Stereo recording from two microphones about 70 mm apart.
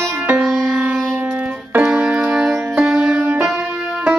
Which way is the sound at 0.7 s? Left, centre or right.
Centre.